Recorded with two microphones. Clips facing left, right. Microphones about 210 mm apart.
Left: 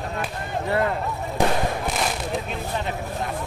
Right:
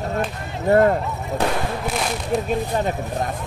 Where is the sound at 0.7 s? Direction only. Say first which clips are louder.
Right 9 dB; 45° right (ahead or behind).